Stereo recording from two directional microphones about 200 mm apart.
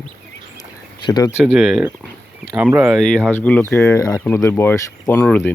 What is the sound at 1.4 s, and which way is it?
Speech, centre (ahead or behind).